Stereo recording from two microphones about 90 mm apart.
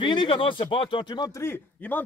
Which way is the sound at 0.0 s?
60° left (ahead or behind).